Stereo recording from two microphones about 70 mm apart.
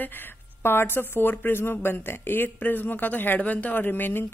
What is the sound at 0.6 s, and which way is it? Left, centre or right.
Speech, left.